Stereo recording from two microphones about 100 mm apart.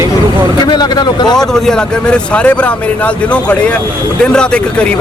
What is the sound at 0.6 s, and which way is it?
Speech, 45° left (ahead or behind).